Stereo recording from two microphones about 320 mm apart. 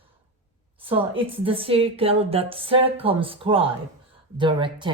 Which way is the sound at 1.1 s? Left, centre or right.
Centre.